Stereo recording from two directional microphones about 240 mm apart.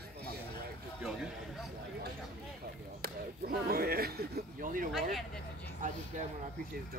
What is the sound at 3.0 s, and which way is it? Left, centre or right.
Speech, right.